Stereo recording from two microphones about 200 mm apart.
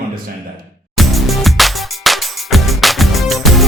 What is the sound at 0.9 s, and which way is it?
Music, centre (ahead or behind).